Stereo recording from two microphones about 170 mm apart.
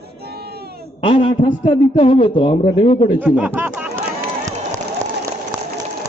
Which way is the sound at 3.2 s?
10° right (ahead or behind).